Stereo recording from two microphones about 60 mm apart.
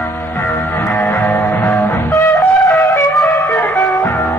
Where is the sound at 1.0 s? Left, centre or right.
Left.